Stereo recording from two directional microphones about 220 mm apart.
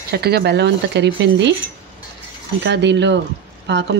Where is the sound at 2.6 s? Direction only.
50° right (ahead or behind).